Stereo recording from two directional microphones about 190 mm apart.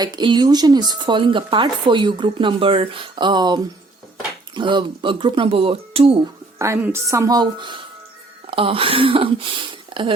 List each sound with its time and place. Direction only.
0.0 s speech: 25° right (ahead or behind)
6.6 s a woman's voice: 15° right (ahead or behind)
9.9 s a sound: 25° right (ahead or behind)